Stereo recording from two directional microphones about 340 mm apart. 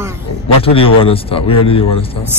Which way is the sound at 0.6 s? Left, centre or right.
Centre.